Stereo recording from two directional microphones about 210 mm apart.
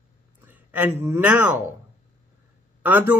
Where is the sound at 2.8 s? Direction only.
10° right (ahead or behind).